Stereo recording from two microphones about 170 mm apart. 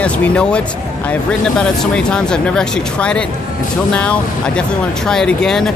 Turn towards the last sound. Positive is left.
turn(degrees=5)  # may be behind; listen again after turning